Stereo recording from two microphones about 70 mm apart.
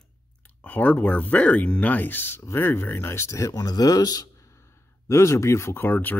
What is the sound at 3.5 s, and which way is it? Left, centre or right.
Speech, left.